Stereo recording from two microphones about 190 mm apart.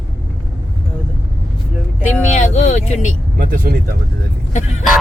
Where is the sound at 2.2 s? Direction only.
40° left (ahead or behind).